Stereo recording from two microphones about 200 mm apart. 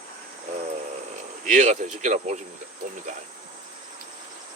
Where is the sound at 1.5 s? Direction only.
40° right (ahead or behind).